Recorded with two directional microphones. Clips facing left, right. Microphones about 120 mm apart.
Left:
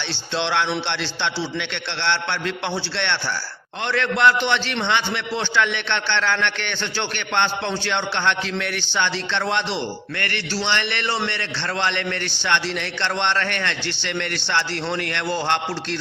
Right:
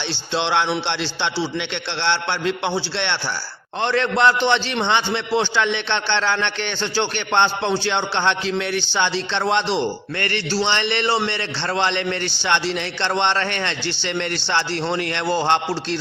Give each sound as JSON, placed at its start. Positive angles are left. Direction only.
{"t": 0.3, "sound": "a man's voice", "side_deg": -20}
{"t": 3.8, "sound": "a man's voice", "side_deg": -30}
{"t": 5.3, "sound": "a man's voice", "side_deg": -15}